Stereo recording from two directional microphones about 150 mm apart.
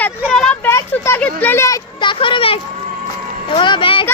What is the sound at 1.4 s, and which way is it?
A child's voice, 15° left (ahead or behind).